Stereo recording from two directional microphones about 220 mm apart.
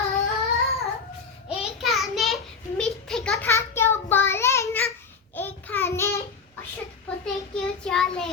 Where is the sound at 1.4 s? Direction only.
Centre (ahead or behind).